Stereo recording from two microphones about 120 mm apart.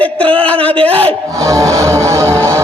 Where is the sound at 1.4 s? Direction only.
25° right (ahead or behind).